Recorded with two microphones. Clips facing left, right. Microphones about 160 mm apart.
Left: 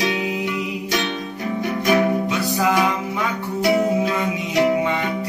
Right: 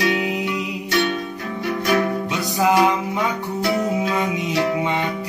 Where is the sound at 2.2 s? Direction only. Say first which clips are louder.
Even; 20° right (ahead or behind).